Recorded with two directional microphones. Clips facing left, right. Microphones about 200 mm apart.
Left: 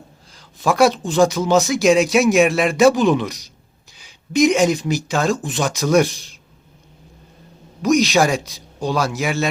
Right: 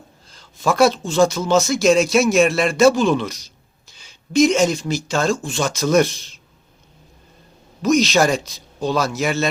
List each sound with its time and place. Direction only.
0.7 s speech: 15° left (ahead or behind)
7.8 s speech: 15° left (ahead or behind)